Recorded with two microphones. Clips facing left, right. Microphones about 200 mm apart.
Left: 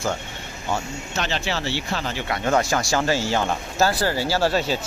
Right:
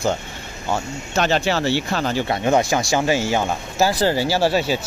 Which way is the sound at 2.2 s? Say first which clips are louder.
Right 1 dB; 20° right (ahead or behind).